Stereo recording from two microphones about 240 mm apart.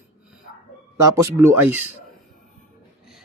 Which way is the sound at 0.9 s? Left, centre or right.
Centre.